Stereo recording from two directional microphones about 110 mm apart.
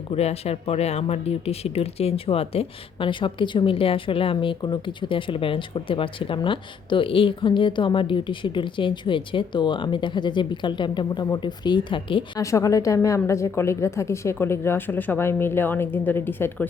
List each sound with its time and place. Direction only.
0.1 s speech: 70° left (ahead or behind); by 12.2 s 50° left (ahead or behind)
12.4 s a woman's voice: 30° left (ahead or behind)